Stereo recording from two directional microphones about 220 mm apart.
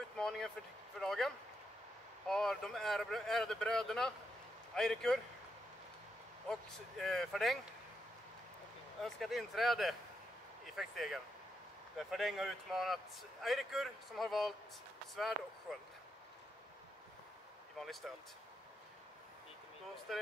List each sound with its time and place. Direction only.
0.2 s speech: centre (ahead or behind)
6.5 s speech: centre (ahead or behind)
9.0 s speech: centre (ahead or behind)
17.7 s speech: centre (ahead or behind)
20.1 s speech: centre (ahead or behind)